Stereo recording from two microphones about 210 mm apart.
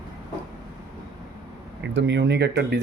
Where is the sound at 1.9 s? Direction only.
55° right (ahead or behind).